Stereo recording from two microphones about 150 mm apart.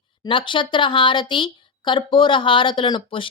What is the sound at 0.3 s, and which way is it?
A woman's voice, 35° left (ahead or behind).